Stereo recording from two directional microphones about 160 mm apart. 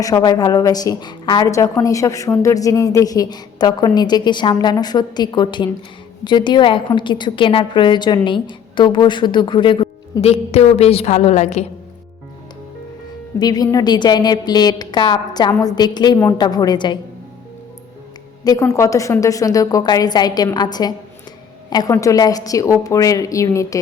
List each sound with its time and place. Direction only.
0.0 s a woman's voice: 25° left (ahead or behind); by 11.6 s 45° left (ahead or behind)
13.4 s a woman's voice: 25° left (ahead or behind)
18.4 s a woman's voice: 20° left (ahead or behind)